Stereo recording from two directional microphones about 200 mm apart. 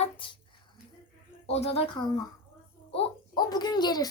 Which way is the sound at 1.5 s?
30° left (ahead or behind).